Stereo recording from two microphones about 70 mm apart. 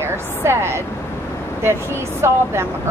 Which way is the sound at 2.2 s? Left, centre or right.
Right.